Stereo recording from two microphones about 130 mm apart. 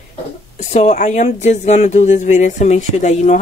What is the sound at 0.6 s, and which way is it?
Speech, 60° left (ahead or behind).